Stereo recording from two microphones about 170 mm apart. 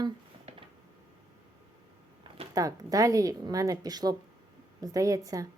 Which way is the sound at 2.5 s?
20° right (ahead or behind).